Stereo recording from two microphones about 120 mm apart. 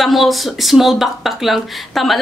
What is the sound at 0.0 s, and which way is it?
A woman's voice, centre (ahead or behind).